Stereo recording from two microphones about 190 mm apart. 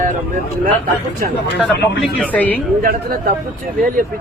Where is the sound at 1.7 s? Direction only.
60° left (ahead or behind).